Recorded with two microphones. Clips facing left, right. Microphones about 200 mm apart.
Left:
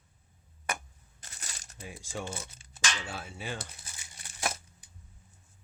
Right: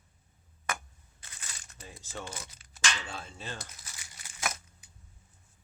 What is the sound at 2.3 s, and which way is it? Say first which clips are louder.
Speech: left 3 dB; 25° left (ahead or behind).